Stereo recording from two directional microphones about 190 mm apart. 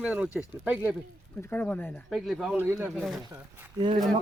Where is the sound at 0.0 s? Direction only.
5° right (ahead or behind).